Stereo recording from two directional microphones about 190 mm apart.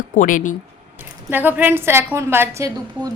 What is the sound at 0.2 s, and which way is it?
Speech, 45° left (ahead or behind).